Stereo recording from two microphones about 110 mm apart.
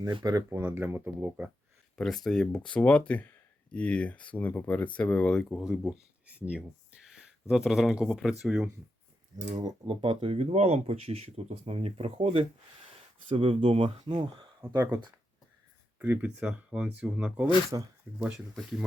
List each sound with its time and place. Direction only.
0.0 s speech: 40° right (ahead or behind)
0.5 s speech: 20° right (ahead or behind)
2.0 s speech: 5° left (ahead or behind)
6.2 s speech: 10° right (ahead or behind)
9.3 s speech: 35° right (ahead or behind)
9.8 s speech: 55° right (ahead or behind); by 14.3 s 75° right (ahead or behind)
14.6 s speech: 20° right (ahead or behind)
16.0 s speech: 10° right (ahead or behind)
17.7 s speech: 35° right (ahead or behind)
18.5 s speech: centre (ahead or behind)